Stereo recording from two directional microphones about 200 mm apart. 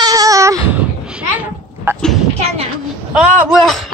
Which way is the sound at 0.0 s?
15° right (ahead or behind).